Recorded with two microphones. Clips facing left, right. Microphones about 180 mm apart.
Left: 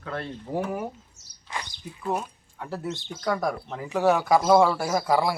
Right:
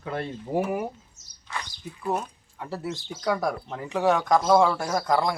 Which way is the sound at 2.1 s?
Centre (ahead or behind).